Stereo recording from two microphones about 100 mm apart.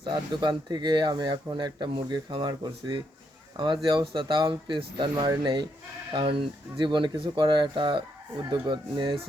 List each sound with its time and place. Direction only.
0.0 s speech: 50° right (ahead or behind)
4.1 s speech: 50° right (ahead or behind)